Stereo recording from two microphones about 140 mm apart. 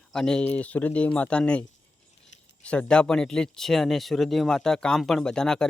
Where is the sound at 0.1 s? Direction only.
5° left (ahead or behind).